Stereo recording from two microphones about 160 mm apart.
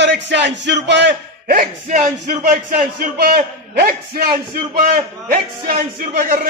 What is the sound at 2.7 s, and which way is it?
A man's voice, 65° right (ahead or behind).